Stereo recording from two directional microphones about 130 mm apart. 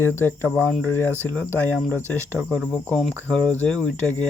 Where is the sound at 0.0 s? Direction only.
15° left (ahead or behind).